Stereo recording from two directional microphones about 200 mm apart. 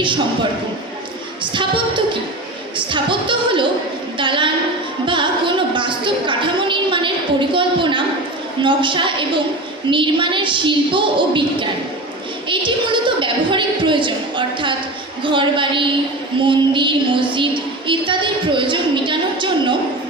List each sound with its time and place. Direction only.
2.7 s music: 25° right (ahead or behind)
12.5 s music: 25° right (ahead or behind)